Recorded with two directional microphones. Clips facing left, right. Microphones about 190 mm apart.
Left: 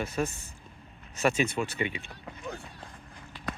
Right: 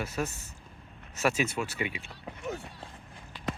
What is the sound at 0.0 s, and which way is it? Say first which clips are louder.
Speech: left 2 dB; 5° right (ahead or behind).